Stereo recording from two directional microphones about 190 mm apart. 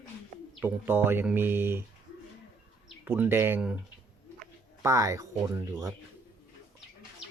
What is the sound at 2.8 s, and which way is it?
Speech, 10° right (ahead or behind).